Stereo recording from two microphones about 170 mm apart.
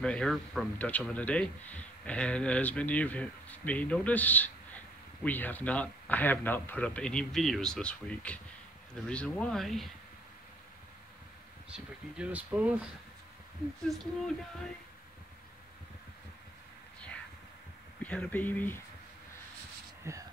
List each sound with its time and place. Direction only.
0.0 s a man's voice: 5° left (ahead or behind)
11.7 s speech: 10° right (ahead or behind)
13.8 s speech: centre (ahead or behind)
18.0 s a man's voice: 10° left (ahead or behind)
20.1 s speech: 15° right (ahead or behind)